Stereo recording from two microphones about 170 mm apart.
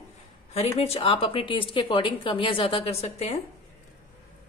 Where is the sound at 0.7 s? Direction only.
35° left (ahead or behind).